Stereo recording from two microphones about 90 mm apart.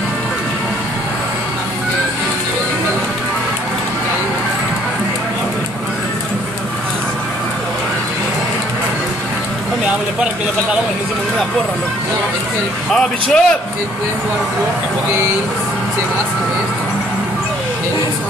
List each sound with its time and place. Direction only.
12.9 s speech: 5° left (ahead or behind)